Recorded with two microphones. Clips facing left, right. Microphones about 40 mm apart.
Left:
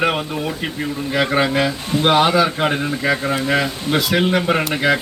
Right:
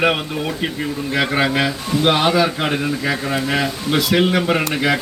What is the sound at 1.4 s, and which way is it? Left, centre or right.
Speech, centre.